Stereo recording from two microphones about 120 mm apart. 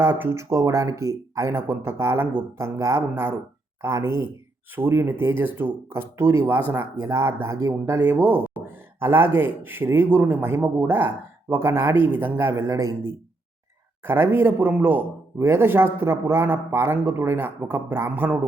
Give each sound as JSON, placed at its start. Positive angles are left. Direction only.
{"t": 0.0, "sound": "speech", "side_deg": -20}
{"t": 11.9, "sound": "speech", "side_deg": 45}
{"t": 12.2, "sound": "speech", "side_deg": -15}